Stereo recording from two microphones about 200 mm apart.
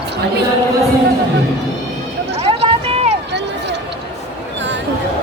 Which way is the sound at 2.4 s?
30° right (ahead or behind).